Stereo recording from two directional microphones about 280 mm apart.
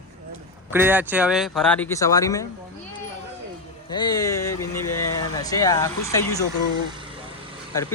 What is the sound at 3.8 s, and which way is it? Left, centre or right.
Speech, centre.